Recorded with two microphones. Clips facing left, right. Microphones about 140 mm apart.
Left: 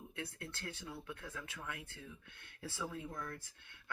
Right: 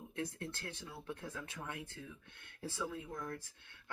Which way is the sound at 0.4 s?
35° right (ahead or behind).